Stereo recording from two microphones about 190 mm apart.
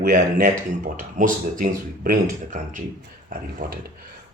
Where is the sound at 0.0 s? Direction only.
45° right (ahead or behind).